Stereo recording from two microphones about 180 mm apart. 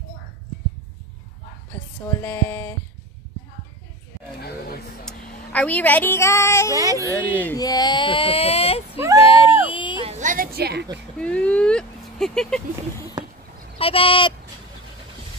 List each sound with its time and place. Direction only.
2.2 s speech: 10° left (ahead or behind)
4.4 s a sound: 60° left (ahead or behind)
5.0 s speech: 5° left (ahead or behind)
6.7 s speech: 20° right (ahead or behind)
7.1 s speech: 10° left (ahead or behind)
7.5 s a sound: 20° left (ahead or behind)
10.0 s a sound: 40° right (ahead or behind); by 11.0 s 70° right (ahead or behind)
11.1 s speech: 5° left (ahead or behind)
13.7 s speech: 30° left (ahead or behind)